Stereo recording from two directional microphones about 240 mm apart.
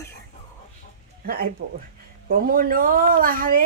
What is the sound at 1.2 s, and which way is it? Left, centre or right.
Speech, right.